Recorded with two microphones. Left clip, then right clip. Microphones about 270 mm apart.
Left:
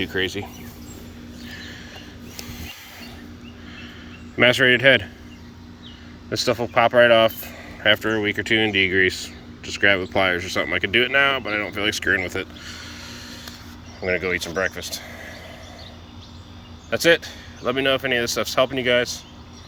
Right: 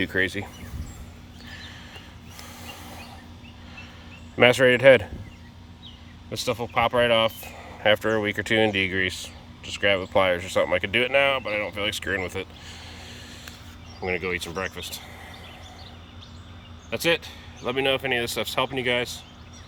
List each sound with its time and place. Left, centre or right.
0.0 s speech: right
1.5 s vehicle: centre
4.4 s speech: centre
6.3 s speech: centre
16.9 s speech: centre